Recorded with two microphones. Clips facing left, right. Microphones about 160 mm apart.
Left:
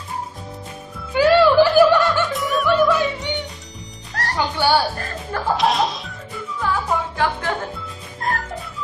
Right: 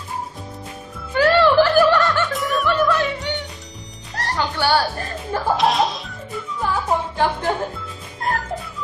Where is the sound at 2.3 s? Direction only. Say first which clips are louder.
Left 2 dB; centre (ahead or behind).